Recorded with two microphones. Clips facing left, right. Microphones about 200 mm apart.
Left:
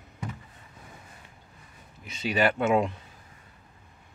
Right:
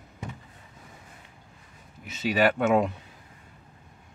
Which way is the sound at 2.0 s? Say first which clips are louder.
Right 2 dB; centre (ahead or behind).